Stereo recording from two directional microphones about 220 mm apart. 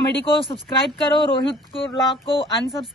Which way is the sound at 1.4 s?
25° left (ahead or behind).